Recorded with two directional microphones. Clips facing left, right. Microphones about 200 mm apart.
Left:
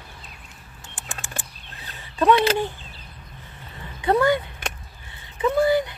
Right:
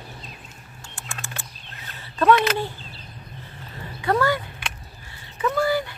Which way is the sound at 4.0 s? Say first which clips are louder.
Left 3 dB; 20° left (ahead or behind).